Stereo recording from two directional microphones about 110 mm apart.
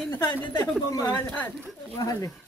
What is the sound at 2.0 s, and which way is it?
Speech, 35° left (ahead or behind).